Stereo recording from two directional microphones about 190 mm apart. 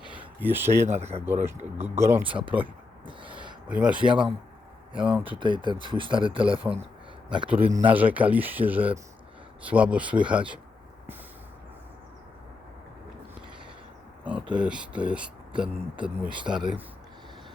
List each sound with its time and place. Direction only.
0.2 s speech: 10° right (ahead or behind)
0.9 s speech: 35° right (ahead or behind)
1.2 s speech: 10° right (ahead or behind)
3.1 s owl: 25° right (ahead or behind)
3.7 s speech: 5° right (ahead or behind)
5.2 s speech: 25° right (ahead or behind)
7.9 s speech: 10° right (ahead or behind)
14.3 s speech: 5° right (ahead or behind)